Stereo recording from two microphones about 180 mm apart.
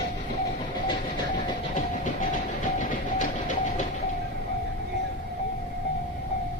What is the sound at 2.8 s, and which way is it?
Train, 45° left (ahead or behind).